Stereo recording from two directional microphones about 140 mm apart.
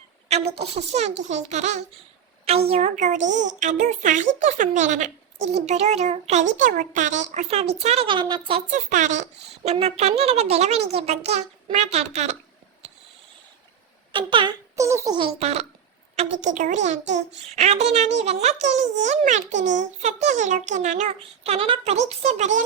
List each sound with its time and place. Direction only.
0.3 s a child's voice: 45° right (ahead or behind)
2.4 s a woman's voice: 45° right (ahead or behind)
6.7 s a child's voice: 70° right (ahead or behind); by 8.6 s 35° right (ahead or behind)
8.7 s a woman's voice: 60° right (ahead or behind)
14.1 s speech: 35° right (ahead or behind)
14.8 s a sound: 20° right (ahead or behind)
15.1 s a child's voice: 40° right (ahead or behind); by 21.2 s 55° right (ahead or behind)
21.2 s a child's voice: 45° right (ahead or behind)